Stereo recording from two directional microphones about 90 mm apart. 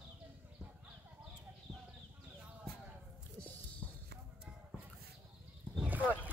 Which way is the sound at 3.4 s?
15° left (ahead or behind).